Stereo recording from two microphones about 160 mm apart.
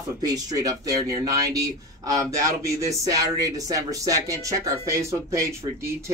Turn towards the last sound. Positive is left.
turn(degrees=-20)  # may be behind; listen again after turning